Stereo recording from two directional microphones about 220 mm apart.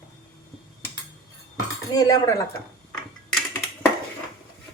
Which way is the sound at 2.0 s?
15° left (ahead or behind).